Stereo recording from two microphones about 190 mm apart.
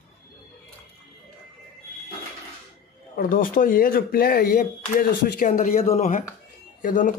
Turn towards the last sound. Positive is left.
turn(degrees=45)  # may be behind; listen again after turning